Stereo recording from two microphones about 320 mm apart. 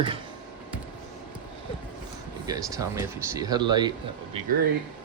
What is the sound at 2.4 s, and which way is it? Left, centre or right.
Speech, centre.